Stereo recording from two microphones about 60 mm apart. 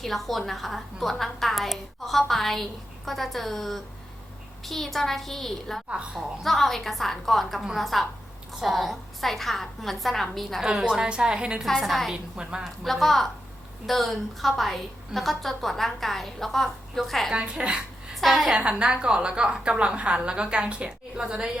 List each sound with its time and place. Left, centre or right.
0.0 s a woman's voice: centre
11.6 s a woman's voice: centre
12.1 s a woman's voice: centre
12.8 s a woman's voice: centre
17.3 s a woman's voice: centre
18.1 s a woman's voice: centre
18.5 s a woman's voice: centre